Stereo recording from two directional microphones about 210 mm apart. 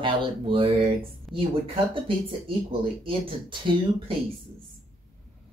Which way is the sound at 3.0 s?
25° right (ahead or behind).